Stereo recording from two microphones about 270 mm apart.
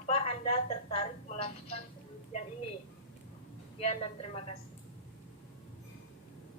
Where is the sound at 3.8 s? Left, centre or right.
Left.